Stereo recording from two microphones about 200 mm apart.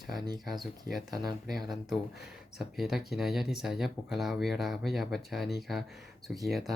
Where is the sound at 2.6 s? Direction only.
Centre (ahead or behind).